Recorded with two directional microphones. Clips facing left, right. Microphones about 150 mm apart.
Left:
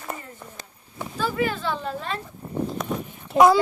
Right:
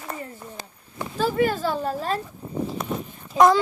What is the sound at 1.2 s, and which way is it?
Speech, 40° right (ahead or behind).